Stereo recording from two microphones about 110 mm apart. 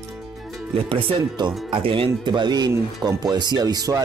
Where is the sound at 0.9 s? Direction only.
45° right (ahead or behind).